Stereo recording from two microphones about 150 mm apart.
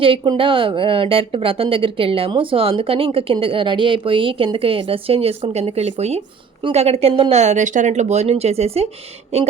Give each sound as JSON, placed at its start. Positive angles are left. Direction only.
{"t": 0.0, "sound": "speech", "side_deg": -35}